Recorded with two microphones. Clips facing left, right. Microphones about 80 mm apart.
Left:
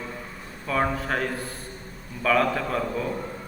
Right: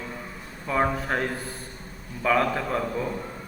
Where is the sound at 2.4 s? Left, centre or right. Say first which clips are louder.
Left 1 dB; centre.